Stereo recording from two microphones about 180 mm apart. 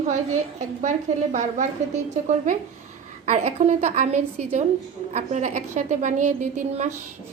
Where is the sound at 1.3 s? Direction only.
45° right (ahead or behind).